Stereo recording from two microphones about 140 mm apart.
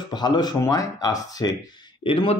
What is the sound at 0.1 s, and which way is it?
Speech, 30° left (ahead or behind).